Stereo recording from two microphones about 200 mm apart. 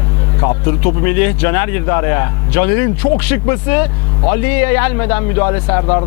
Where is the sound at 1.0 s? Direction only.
15° left (ahead or behind).